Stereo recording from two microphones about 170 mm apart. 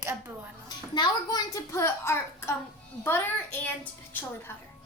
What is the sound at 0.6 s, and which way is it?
A child's voice, 25° left (ahead or behind).